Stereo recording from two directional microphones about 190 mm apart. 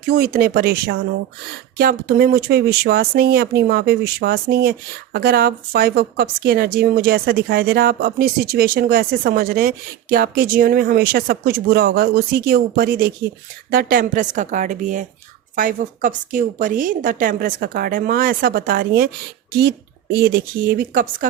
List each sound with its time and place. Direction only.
0.1 s a woman's voice: 50° right (ahead or behind)